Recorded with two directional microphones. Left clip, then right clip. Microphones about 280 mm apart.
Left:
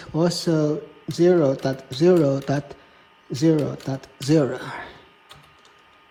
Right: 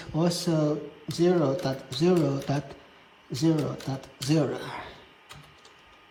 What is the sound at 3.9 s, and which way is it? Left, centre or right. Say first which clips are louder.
Speech: left 8 dB; centre.